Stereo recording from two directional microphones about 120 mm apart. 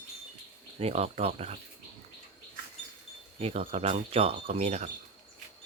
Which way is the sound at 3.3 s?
60° right (ahead or behind).